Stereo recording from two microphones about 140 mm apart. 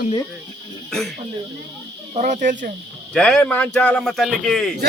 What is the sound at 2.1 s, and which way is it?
Speech, 60° right (ahead or behind).